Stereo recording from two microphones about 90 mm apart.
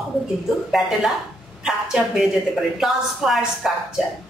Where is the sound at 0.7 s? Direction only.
5° right (ahead or behind).